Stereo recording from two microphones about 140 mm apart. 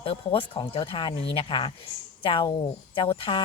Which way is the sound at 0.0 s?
40° left (ahead or behind).